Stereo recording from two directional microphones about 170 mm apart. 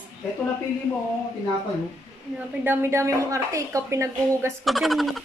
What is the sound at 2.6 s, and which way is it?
A woman's voice, 15° right (ahead or behind).